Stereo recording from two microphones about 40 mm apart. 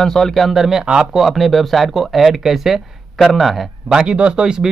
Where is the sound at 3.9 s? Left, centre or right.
Right.